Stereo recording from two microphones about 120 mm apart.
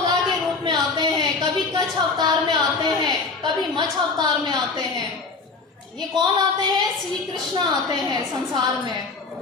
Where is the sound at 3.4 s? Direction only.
35° right (ahead or behind).